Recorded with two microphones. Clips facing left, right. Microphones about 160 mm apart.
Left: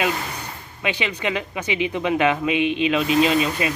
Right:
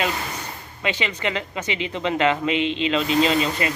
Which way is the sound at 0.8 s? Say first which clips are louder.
Left 1 dB; 15° left (ahead or behind).